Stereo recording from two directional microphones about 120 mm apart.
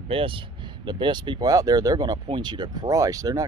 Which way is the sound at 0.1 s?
50° right (ahead or behind).